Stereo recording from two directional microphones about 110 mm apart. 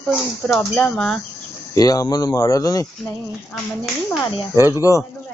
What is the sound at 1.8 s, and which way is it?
Speech, 35° left (ahead or behind).